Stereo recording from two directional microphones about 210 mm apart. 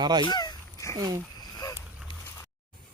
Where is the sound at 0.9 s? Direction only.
15° right (ahead or behind).